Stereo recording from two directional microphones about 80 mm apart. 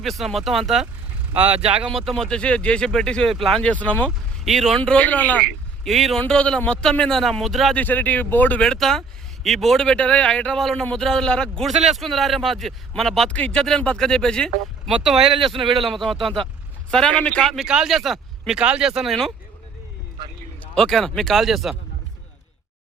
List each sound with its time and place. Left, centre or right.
0.0 s a man's voice: centre
1.3 s speech: centre
1.9 s speech: centre
3.6 s speech: centre
4.4 s a man's voice: centre
4.8 s speech: centre
5.8 s a man's voice: centre
6.1 s a man's voice: centre
7.8 s speech: left
8.6 s speech: centre
11.7 s a man's voice: centre
14.8 s a man's voice: centre
17.4 s a man's voice: centre
20.7 s a man's voice: centre